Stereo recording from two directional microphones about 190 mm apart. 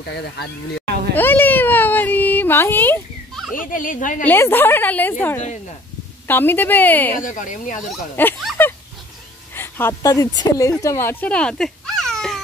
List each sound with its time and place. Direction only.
0.0 s speech: 60° left (ahead or behind)
1.1 s a sound: 10° left (ahead or behind)
3.5 s speech: 45° left (ahead or behind)
4.2 s a woman's voice: 10° left (ahead or behind)
6.2 s a woman's voice: 10° left (ahead or behind)
7.1 s speech: 45° left (ahead or behind)
8.2 s a woman's voice: 10° left (ahead or behind)
8.6 s a sound: 10° left (ahead or behind)
9.6 s speech: 10° left (ahead or behind)